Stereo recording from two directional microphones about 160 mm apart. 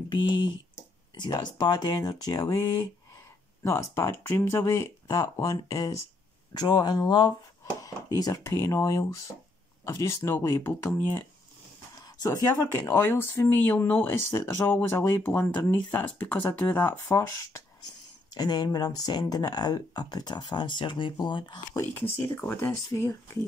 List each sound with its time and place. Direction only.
0.1 s speech: 30° left (ahead or behind)
12.8 s speech: 15° left (ahead or behind); by 21.8 s 30° left (ahead or behind)
22.1 s speech: 15° left (ahead or behind)